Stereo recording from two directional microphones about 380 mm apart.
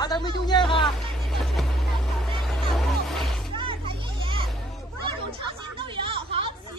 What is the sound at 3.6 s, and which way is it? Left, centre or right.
Children playing, centre.